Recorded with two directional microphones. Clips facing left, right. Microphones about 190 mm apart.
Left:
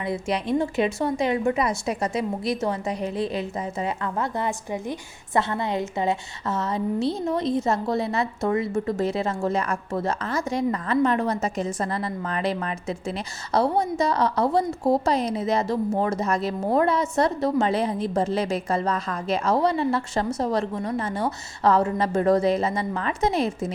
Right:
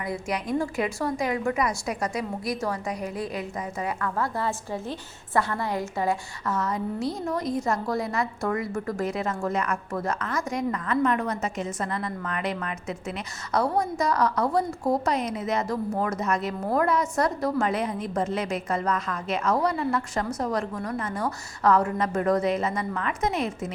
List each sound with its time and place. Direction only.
0.0 s a woman's voice: 25° left (ahead or behind)